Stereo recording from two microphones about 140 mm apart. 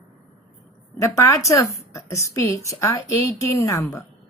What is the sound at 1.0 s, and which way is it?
A woman's voice, 20° left (ahead or behind).